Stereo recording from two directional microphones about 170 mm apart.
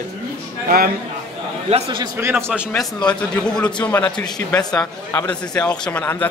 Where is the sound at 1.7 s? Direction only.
35° right (ahead or behind).